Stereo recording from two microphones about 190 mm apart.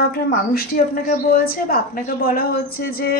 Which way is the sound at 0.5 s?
50° left (ahead or behind).